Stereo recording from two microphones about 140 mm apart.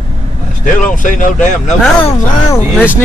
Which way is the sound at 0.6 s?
70° left (ahead or behind).